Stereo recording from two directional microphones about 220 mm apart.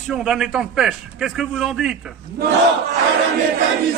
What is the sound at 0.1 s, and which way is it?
A man's voice, centre (ahead or behind).